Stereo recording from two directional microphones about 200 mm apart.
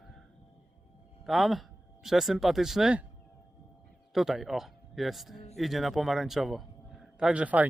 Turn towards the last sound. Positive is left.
turn(degrees=-5)  # may be behind; listen again after turning